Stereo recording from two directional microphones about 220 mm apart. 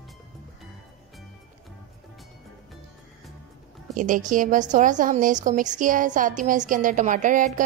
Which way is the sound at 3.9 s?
35° right (ahead or behind).